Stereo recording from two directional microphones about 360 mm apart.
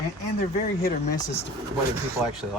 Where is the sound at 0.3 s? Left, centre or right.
Left.